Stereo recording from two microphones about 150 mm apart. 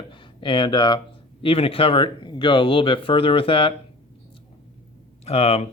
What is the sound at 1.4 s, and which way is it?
Speech, 35° left (ahead or behind).